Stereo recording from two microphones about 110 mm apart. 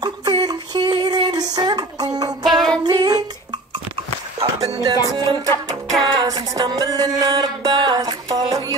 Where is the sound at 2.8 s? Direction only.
40° right (ahead or behind).